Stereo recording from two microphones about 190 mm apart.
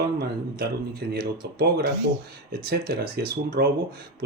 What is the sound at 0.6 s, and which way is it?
Speech, 60° right (ahead or behind).